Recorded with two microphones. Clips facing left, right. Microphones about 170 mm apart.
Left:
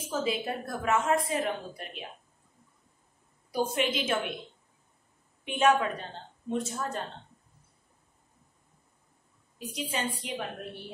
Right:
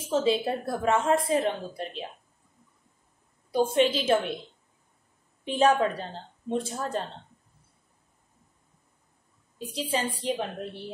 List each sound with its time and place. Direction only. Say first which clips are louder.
0.1 s a woman's voice: right 6 dB; 30° right (ahead or behind)
3.5 s speech: right 6 dB; 30° right (ahead or behind)
5.4 s speech: right 2 dB; 35° right (ahead or behind)
9.6 s a woman's voice: right 4 dB; 30° right (ahead or behind)